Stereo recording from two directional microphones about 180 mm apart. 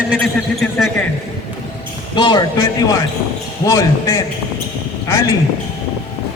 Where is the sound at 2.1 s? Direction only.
25° left (ahead or behind).